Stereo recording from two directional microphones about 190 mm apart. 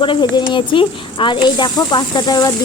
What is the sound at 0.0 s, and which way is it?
Speech, 25° left (ahead or behind).